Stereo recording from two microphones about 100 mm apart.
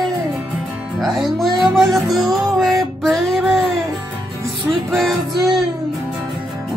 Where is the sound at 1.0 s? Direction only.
Centre (ahead or behind).